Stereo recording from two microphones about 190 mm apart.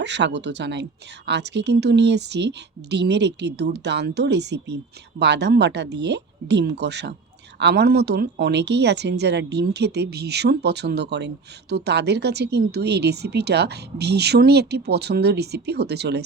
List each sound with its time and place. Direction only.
0.0 s speech: 65° right (ahead or behind)